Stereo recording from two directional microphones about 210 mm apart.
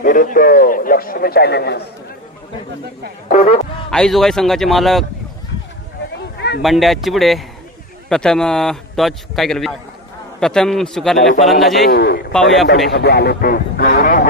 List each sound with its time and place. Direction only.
0.0 s a man's voice: 40° left (ahead or behind)
3.2 s speech: 35° left (ahead or behind)
3.8 s a man's voice: 5° left (ahead or behind)
6.6 s a man's voice: centre (ahead or behind)
11.9 s a man's voice: 45° left (ahead or behind)
12.3 s a man's voice: 5° left (ahead or behind)
12.9 s a man's voice: 50° left (ahead or behind)